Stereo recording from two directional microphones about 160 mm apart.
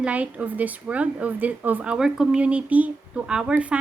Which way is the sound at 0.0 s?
10° right (ahead or behind).